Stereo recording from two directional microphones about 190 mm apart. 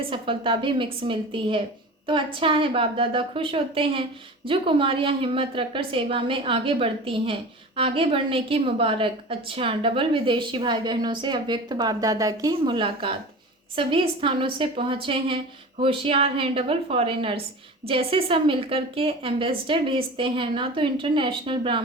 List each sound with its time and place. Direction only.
0.0 s a woman's voice: 25° right (ahead or behind)